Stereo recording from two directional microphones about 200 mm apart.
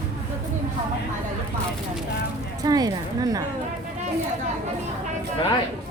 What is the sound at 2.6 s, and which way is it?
Speech, 20° right (ahead or behind).